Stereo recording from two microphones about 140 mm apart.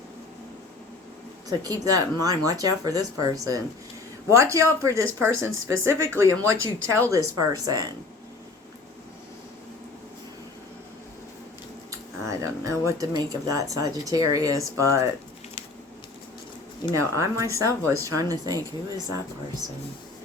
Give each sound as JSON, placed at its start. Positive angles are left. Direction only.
{"t": 1.5, "sound": "speech", "side_deg": -25}
{"t": 11.9, "sound": "speech", "side_deg": -20}
{"t": 16.9, "sound": "speech", "side_deg": -20}